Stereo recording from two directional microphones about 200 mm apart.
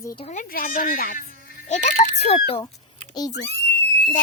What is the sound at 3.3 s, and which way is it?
Speech, 60° left (ahead or behind).